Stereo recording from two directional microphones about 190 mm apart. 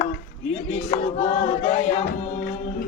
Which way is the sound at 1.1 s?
40° left (ahead or behind).